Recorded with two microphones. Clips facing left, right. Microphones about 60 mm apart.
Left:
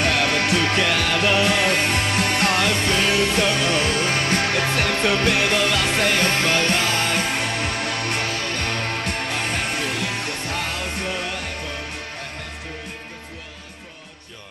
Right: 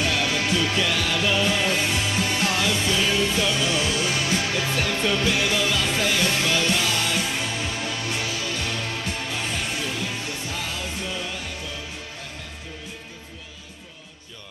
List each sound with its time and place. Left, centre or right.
0.0 s music: left